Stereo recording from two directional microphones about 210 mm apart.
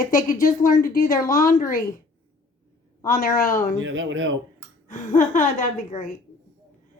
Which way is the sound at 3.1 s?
40° left (ahead or behind).